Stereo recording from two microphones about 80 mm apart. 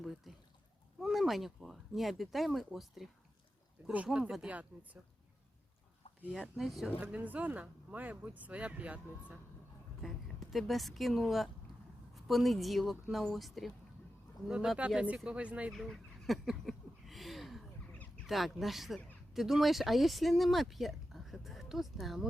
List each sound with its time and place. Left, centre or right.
0.0 s pour: centre
1.0 s speech: centre
3.9 s speech: centre
6.4 s speech: centre
7.0 s speech: centre
10.0 s speech: centre
14.8 s speech: centre
15.7 s a sound: centre
17.9 s duck: centre
18.3 s speech: centre